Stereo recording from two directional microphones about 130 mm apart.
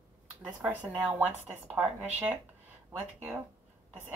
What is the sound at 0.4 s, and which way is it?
Speech, 15° right (ahead or behind).